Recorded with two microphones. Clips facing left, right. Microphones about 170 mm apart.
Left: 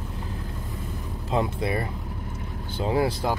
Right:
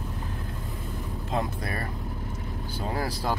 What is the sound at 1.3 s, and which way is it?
Speech, 20° left (ahead or behind).